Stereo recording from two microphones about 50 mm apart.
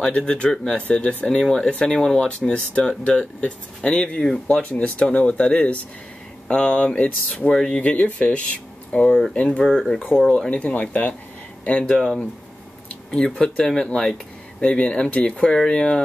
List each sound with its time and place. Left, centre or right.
0.0 s speech: centre
7.5 s speech: centre
7.8 s speech: left; by 10.0 s centre
10.0 s speech: centre
10.3 s speech: left
11.9 s speech: centre
13.1 s speech: centre